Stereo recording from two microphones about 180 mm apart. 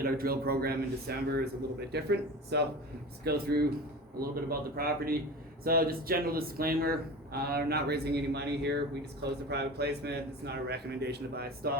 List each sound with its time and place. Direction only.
0.0 s speech: 55° right (ahead or behind)